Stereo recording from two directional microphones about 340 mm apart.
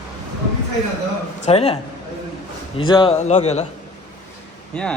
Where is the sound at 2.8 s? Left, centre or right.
Centre.